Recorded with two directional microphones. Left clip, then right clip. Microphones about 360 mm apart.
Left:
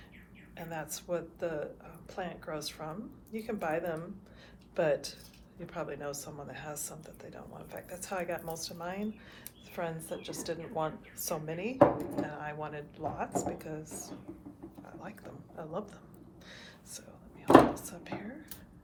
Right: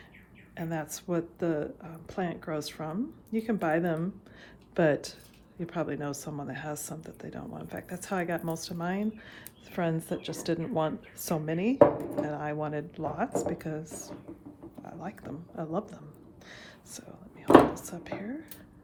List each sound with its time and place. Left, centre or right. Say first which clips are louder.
0.5 s speech: right 5 dB; right
16.5 s a sound: right 2 dB; centre
17.7 s speech: right 4 dB; centre